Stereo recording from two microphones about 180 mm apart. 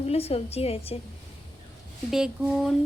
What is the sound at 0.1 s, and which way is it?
Speech, 35° left (ahead or behind).